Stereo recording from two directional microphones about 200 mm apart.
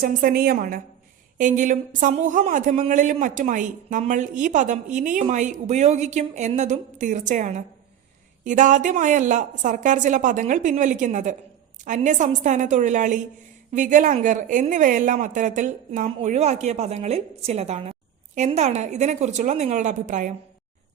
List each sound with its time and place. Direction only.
0.0 s a woman's voice: 50° right (ahead or behind)